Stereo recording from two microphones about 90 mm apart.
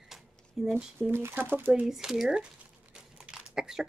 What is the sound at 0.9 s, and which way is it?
Speech, 25° right (ahead or behind).